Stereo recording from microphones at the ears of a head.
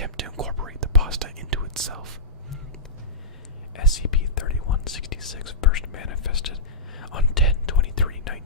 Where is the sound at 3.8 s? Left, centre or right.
Left.